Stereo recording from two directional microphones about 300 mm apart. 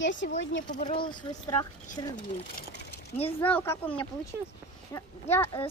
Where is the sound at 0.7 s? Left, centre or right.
Left.